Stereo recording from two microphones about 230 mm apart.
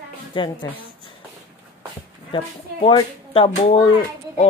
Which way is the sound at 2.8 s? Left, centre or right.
Left.